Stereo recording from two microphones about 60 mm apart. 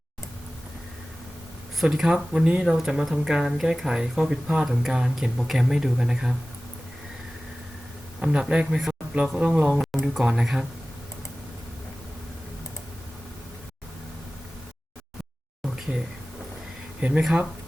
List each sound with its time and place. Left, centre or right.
1.8 s speech: centre
2.6 s speech: centre
8.2 s speech: centre
9.7 s speech: centre
17.0 s speech: centre